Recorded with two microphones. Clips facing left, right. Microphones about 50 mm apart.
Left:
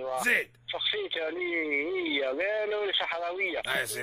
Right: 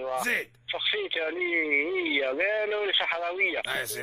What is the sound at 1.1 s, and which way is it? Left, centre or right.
Speech, right.